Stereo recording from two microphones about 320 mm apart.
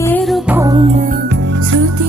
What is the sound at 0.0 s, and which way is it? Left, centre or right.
Music, centre.